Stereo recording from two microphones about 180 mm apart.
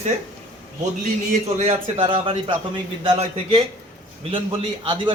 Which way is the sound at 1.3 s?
35° right (ahead or behind).